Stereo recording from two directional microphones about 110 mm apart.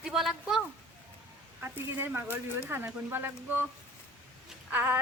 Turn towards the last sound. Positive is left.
turn(degrees=-15)  # may be behind; listen again after turning